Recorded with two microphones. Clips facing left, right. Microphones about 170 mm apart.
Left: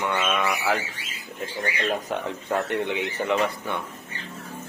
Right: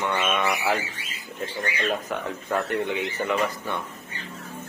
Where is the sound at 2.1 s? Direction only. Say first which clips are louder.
Left 1 dB; 25° left (ahead or behind).